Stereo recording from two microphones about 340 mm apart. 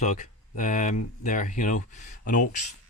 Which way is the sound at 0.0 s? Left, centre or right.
Left.